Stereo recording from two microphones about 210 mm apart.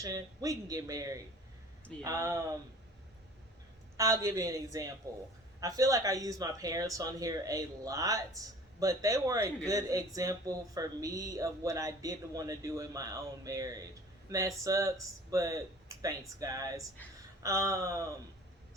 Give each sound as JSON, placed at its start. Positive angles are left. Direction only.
{"t": 0.0, "sound": "speech", "side_deg": -15}
{"t": 3.9, "sound": "speech", "side_deg": -15}